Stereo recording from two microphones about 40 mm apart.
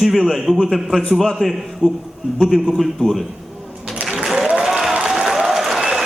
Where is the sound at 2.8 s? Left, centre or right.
Centre.